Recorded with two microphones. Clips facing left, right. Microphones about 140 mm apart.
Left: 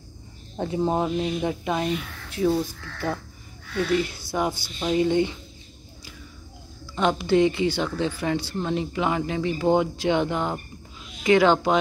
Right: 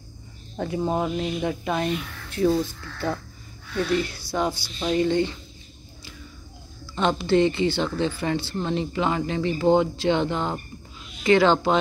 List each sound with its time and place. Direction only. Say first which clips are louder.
0.6 s speech: left 1 dB; 25° left (ahead or behind)
2.3 s speech: right 1 dB; 5° left (ahead or behind)
4.3 s speech: right 2 dB; 15° left (ahead or behind)
7.0 s speech: even; 10° left (ahead or behind)